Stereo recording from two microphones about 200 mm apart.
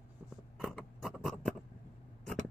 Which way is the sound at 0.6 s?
Centre (ahead or behind).